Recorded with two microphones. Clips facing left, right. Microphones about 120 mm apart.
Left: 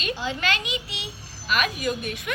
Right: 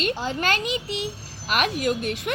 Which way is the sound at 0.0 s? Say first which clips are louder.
Right 3 dB; 45° right (ahead or behind).